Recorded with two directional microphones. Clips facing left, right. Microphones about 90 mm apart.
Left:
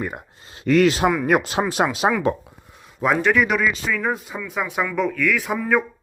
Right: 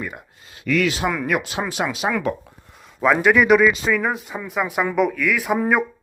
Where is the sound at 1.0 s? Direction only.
10° left (ahead or behind).